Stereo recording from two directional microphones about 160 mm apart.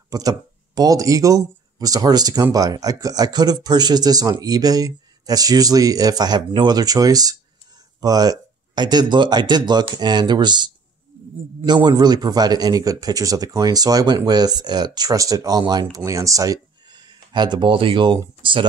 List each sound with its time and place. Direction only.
0.1 s speech: 25° right (ahead or behind)